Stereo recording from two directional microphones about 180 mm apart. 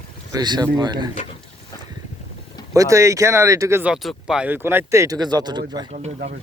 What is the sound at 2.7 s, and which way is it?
Speech, 15° right (ahead or behind).